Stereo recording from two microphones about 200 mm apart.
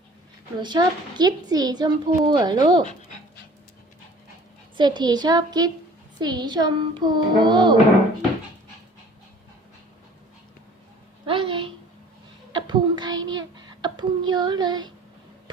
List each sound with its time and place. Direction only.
0.6 s a woman's voice: 20° right (ahead or behind)
4.8 s a woman's voice: 20° right (ahead or behind)
11.3 s a sound: 25° right (ahead or behind)
13.8 s child singing: 20° right (ahead or behind)